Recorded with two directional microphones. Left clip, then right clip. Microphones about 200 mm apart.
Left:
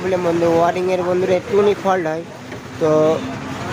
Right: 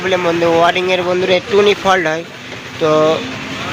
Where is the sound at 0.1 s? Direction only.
Centre (ahead or behind).